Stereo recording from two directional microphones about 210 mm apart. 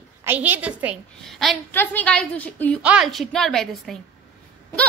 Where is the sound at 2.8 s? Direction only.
5° right (ahead or behind).